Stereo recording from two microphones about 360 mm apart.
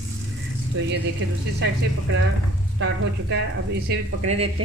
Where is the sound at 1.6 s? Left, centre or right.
Right.